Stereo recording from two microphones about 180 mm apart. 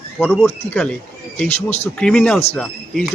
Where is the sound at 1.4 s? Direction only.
40° left (ahead or behind).